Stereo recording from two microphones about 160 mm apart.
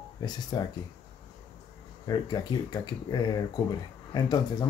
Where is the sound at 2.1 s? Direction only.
25° left (ahead or behind).